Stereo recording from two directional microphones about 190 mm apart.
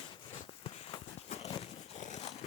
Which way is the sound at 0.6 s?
35° left (ahead or behind).